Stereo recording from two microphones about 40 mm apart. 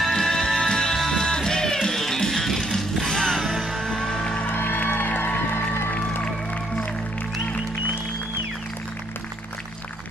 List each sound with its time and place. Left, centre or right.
0.2 s music: centre
3.3 s music: centre
3.7 s music: centre
4.5 s music: left
4.7 s music: left